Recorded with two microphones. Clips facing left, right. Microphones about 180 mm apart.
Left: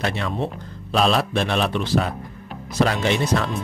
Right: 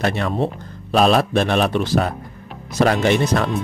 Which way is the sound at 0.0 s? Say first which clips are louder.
Right 4 dB; 50° right (ahead or behind).